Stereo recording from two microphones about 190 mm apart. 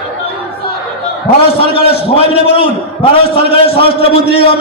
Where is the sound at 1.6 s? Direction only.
30° left (ahead or behind).